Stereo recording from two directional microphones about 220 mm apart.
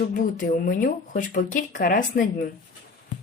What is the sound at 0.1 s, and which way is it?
Speech, 40° left (ahead or behind).